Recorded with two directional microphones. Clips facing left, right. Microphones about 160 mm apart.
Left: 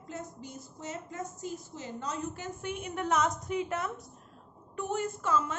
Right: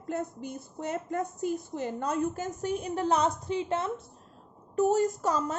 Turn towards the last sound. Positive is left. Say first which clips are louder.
# right 3 dB
turn(degrees=-40)  # may be behind; listen again after turning